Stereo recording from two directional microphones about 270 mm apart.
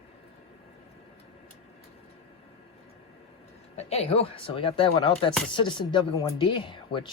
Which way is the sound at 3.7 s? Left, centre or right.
Left.